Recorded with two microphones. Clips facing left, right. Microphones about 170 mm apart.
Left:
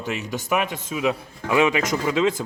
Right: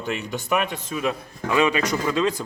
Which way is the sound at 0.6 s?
15° left (ahead or behind).